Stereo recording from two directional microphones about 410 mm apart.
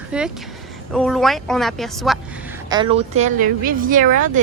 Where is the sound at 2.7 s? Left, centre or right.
Centre.